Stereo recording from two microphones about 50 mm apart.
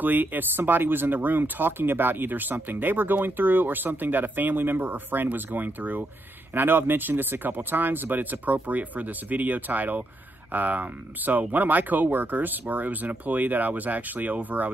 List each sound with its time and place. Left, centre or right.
0.0 s speech: right